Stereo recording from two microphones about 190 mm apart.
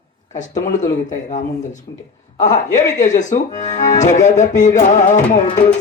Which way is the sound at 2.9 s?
40° left (ahead or behind).